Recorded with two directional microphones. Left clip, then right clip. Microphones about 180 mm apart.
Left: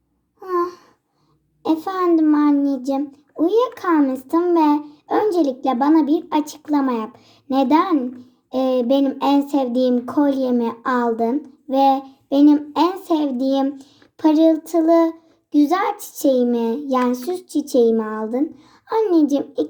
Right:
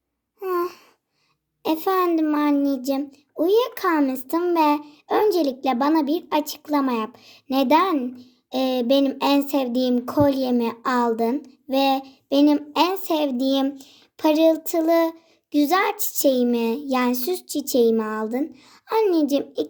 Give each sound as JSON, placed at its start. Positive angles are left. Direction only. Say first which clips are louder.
{"t": 0.5, "sound": "babbling", "louder": "left 4 dB", "side_deg": -25}
{"t": 1.6, "sound": "a child's voice", "louder": "left 1 dB", "side_deg": -25}